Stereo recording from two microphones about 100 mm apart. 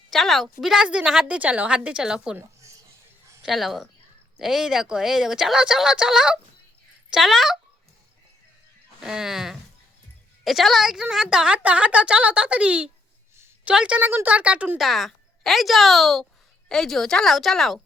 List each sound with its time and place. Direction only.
0.1 s a woman's voice: centre (ahead or behind)
2.4 s a sound: 30° right (ahead or behind)
3.4 s a woman's voice: centre (ahead or behind)
9.0 s a woman's voice: 5° right (ahead or behind)
14.8 s a woman's voice: centre (ahead or behind)